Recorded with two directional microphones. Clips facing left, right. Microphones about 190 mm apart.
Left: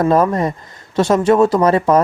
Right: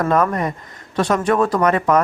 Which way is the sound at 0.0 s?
30° left (ahead or behind).